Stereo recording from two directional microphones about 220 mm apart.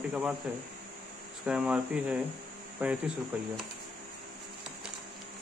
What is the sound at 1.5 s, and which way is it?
Speech, 5° right (ahead or behind).